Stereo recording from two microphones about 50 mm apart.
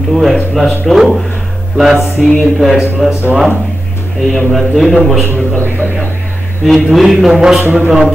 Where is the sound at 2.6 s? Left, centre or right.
Centre.